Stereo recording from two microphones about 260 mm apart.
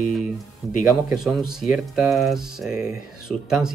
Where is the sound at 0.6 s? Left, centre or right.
Centre.